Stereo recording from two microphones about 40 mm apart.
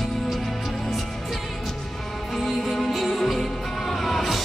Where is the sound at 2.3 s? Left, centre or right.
Centre.